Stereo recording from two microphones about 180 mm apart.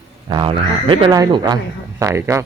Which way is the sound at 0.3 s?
25° right (ahead or behind).